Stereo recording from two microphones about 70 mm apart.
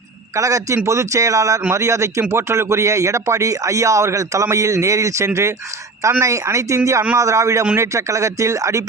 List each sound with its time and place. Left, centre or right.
0.3 s speech: right